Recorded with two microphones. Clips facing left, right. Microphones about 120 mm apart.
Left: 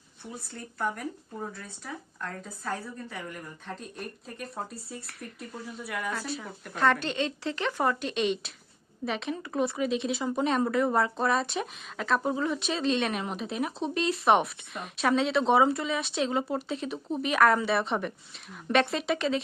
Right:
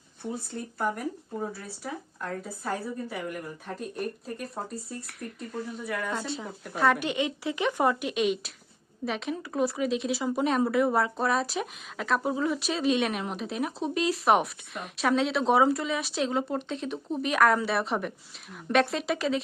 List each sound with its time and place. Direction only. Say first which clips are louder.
0.2 s speech: right 7 dB; 50° right (ahead or behind)
0.8 s speech: right 2 dB; 10° right (ahead or behind)
6.1 s speech: right 1 dB; 25° right (ahead or behind)
6.4 s speech: even; 10° right (ahead or behind)
8.1 s speech: right 1 dB; 5° right (ahead or behind)